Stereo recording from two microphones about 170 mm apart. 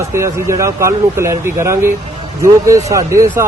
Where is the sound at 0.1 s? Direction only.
15° right (ahead or behind).